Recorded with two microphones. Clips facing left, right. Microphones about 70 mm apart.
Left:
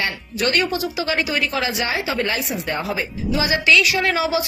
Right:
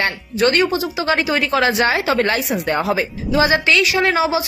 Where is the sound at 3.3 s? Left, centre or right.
Right.